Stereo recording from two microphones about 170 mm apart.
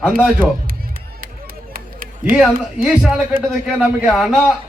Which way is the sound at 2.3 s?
10° right (ahead or behind).